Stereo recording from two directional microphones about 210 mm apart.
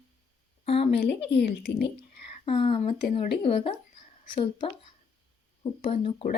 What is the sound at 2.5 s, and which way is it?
Speech, 25° left (ahead or behind).